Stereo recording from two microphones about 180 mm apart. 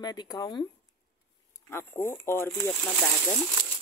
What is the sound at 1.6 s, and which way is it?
Speech, 15° left (ahead or behind).